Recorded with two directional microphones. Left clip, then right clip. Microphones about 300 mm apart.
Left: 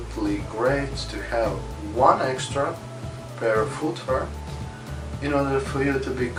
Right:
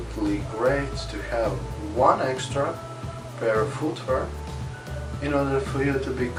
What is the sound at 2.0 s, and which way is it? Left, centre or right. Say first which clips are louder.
Speech: left 2 dB; centre.